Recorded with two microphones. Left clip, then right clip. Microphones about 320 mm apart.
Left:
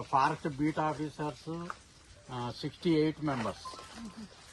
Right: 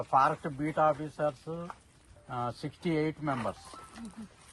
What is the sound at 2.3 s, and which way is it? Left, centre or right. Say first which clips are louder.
Speech: right 3 dB; right.